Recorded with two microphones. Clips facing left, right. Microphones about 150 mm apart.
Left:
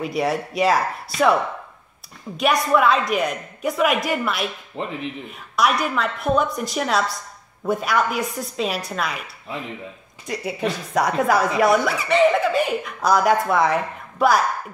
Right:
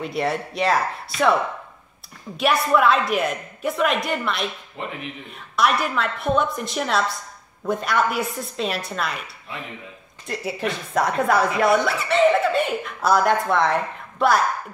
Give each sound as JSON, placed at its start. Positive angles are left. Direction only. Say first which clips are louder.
{"t": 0.0, "sound": "speech", "louder": "left 2 dB", "side_deg": 5}
{"t": 4.8, "sound": "speech", "louder": "left 3 dB", "side_deg": 30}
{"t": 5.6, "sound": "speech", "louder": "left 1 dB", "side_deg": 0}
{"t": 10.2, "sound": "speech", "louder": "left 2 dB", "side_deg": 0}